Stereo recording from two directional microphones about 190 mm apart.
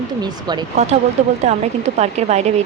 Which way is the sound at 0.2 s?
20° right (ahead or behind).